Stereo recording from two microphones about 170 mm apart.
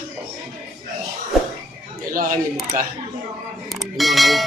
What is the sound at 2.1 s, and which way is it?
Speech, 55° right (ahead or behind).